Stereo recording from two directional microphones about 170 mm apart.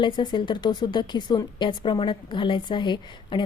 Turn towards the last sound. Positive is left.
turn(degrees=25)  # may be behind; listen again after turning